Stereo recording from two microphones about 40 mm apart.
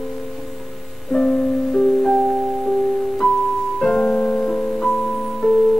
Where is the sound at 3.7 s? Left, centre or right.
Centre.